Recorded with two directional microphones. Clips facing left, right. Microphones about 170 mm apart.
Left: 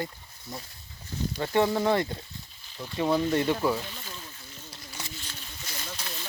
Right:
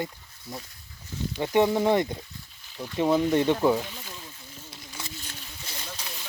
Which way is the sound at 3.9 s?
10° right (ahead or behind).